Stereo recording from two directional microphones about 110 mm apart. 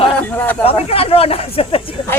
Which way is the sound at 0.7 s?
60° left (ahead or behind).